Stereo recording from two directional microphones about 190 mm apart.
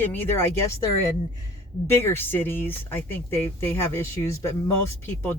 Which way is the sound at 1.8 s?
10° left (ahead or behind).